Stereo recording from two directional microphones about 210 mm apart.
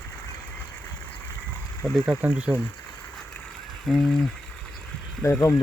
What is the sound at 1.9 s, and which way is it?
Speech, 5° right (ahead or behind).